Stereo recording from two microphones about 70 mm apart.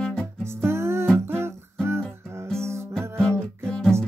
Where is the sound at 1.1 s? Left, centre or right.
Right.